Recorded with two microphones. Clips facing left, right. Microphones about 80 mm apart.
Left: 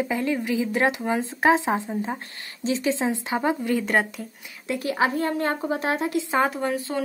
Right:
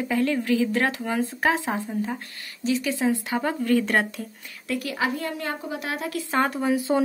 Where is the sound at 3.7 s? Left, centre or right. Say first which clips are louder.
Right 1 dB; centre.